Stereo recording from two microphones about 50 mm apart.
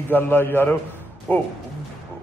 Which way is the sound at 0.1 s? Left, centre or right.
Left.